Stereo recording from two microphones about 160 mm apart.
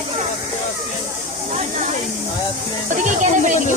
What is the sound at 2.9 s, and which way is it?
Music, 50° right (ahead or behind).